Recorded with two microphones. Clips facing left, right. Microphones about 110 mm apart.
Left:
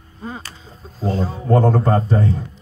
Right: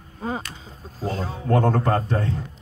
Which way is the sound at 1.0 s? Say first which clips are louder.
Left 5 dB; 15° left (ahead or behind).